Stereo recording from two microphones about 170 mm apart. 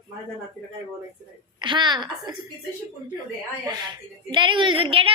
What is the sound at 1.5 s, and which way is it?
Speech, 30° right (ahead or behind).